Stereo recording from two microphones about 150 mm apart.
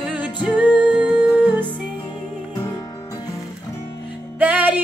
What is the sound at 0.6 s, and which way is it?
Music, 10° right (ahead or behind).